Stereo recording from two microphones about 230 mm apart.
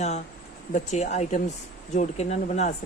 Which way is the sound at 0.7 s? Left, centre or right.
Left.